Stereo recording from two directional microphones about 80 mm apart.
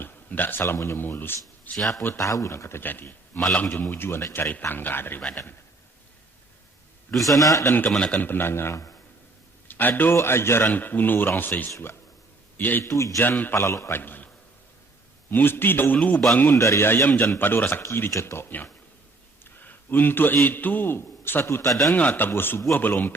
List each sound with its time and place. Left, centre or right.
0.0 s speech: left
1.7 s speech: centre
2.0 s a man's voice: left
3.4 s a man's voice: centre
3.7 s speech: left
7.3 s a man's voice: left
7.9 s a man's voice: centre
8.2 s a man's voice: left
10.7 s a man's voice: left
12.8 s a man's voice: left
15.3 s speech: left
16.6 s a man's voice: left
21.9 s speech: left